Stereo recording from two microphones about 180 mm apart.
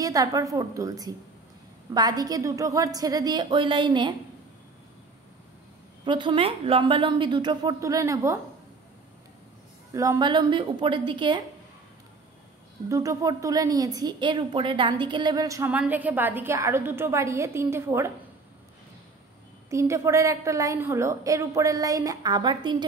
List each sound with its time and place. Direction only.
0.0 s a woman's voice: 20° right (ahead or behind)
6.0 s a woman's voice: 25° right (ahead or behind)
9.9 s a woman's voice: 20° right (ahead or behind)
12.8 s a woman's voice: 15° right (ahead or behind)
19.7 s a woman's voice: 15° right (ahead or behind)